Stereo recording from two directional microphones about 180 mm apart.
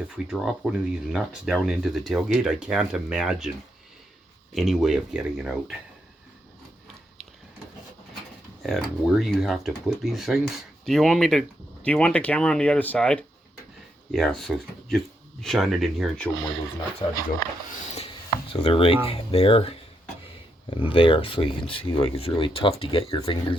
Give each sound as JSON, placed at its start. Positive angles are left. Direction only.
{"t": 0.3, "sound": "speech", "side_deg": -5}
{"t": 4.5, "sound": "speech", "side_deg": 0}
{"t": 8.6, "sound": "speech", "side_deg": 0}
{"t": 17.0, "sound": "speech", "side_deg": 25}
{"t": 18.5, "sound": "speech", "side_deg": 30}
{"t": 20.9, "sound": "speech", "side_deg": 30}